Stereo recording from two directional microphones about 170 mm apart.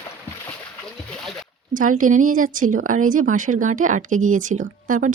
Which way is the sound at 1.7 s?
50° right (ahead or behind).